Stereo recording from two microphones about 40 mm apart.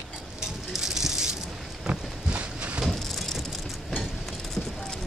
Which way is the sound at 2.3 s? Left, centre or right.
Right.